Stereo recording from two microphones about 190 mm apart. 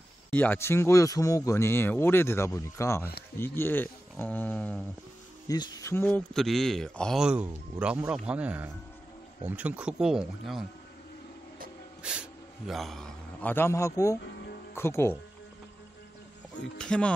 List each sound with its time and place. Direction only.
0.3 s speech: 10° left (ahead or behind)
5.5 s speech: 20° left (ahead or behind)
6.0 s a man's voice: 5° left (ahead or behind)
12.0 s a man's voice: 5° right (ahead or behind); by 14.1 s 15° left (ahead or behind)
14.2 s music: 60° left (ahead or behind)
14.7 s speech: 15° left (ahead or behind)
16.7 s a man's voice: 5° left (ahead or behind)